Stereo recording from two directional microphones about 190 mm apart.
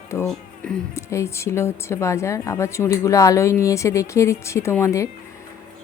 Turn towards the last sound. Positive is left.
turn(degrees=15)  # may be behind; listen again after turning